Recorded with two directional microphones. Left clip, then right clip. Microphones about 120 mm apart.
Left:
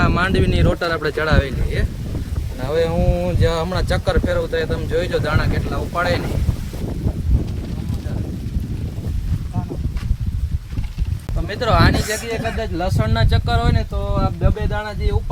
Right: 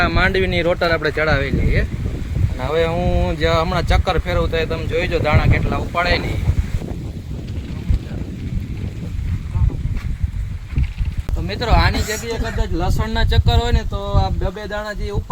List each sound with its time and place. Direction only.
0.0 s speech: 5° right (ahead or behind)
1.1 s speech: 10° left (ahead or behind)
2.6 s speech: 20° right (ahead or behind)
11.4 s speech: 25° left (ahead or behind); by 14.2 s centre (ahead or behind)